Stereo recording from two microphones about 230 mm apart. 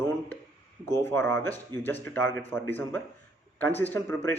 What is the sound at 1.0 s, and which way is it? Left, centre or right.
Speech, centre.